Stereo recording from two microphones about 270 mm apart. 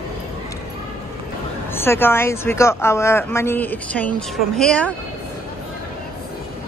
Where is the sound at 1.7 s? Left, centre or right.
Centre.